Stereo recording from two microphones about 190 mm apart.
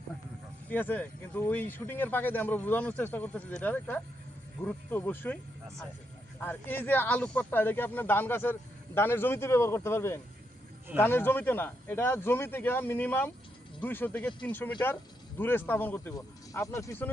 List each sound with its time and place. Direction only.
0.7 s speech: 10° left (ahead or behind)
6.4 s speech: 10° left (ahead or behind)